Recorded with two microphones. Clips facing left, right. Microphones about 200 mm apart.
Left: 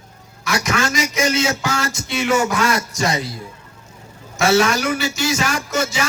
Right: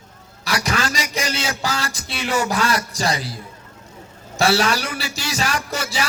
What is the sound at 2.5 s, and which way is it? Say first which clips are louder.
Speech: left 2 dB; 35° right (ahead or behind).